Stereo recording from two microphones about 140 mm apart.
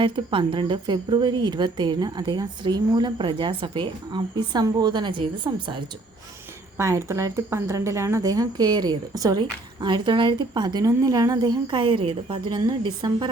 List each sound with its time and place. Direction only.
0.0 s a woman's voice: 35° right (ahead or behind)
6.7 s a woman's voice: 20° right (ahead or behind)